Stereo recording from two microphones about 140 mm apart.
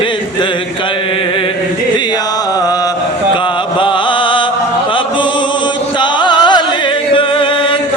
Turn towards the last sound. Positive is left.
turn(degrees=40)  # may be behind; listen again after turning